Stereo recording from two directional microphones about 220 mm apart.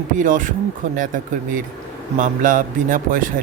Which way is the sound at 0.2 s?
35° right (ahead or behind).